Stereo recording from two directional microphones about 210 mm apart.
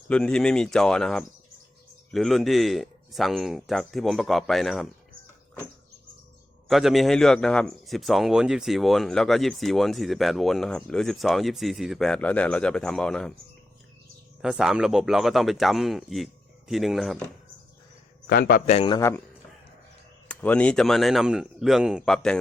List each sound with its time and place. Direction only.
0.1 s a man's voice: 5° left (ahead or behind)
6.7 s a man's voice: centre (ahead or behind)
14.4 s a man's voice: 5° right (ahead or behind)
18.3 s a man's voice: 45° left (ahead or behind)
18.9 s a man's voice: 15° left (ahead or behind)
20.2 s a man's voice: 5° left (ahead or behind)